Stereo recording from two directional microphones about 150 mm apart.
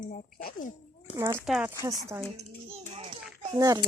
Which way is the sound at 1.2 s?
15° right (ahead or behind).